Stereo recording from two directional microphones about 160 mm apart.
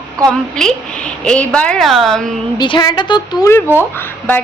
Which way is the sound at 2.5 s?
30° left (ahead or behind).